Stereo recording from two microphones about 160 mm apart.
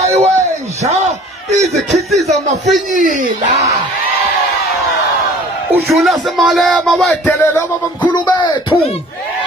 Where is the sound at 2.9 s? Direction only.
55° right (ahead or behind).